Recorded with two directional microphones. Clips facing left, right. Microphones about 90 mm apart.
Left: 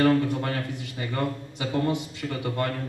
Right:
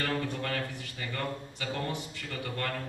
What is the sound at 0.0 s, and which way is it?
A man's voice, 20° left (ahead or behind).